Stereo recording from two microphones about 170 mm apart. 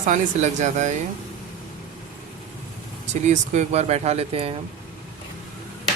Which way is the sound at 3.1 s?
45° right (ahead or behind).